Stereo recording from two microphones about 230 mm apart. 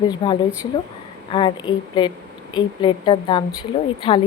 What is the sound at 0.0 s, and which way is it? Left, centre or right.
A woman's voice, centre.